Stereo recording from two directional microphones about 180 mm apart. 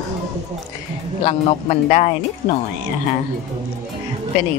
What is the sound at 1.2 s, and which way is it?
Speech, 35° left (ahead or behind).